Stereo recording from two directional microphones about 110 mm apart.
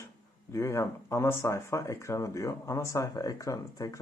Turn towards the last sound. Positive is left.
turn(degrees=30)  # may be behind; listen again after turning